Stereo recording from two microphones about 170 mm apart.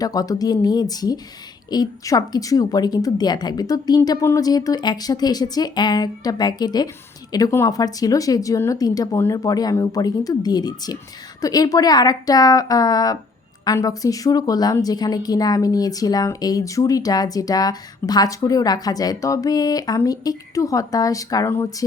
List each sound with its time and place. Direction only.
0.0 s a woman's voice: 20° left (ahead or behind)